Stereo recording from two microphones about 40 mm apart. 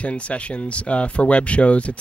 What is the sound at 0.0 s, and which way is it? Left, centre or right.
Speech, left.